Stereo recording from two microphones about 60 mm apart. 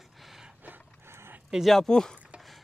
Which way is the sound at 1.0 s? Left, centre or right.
Right.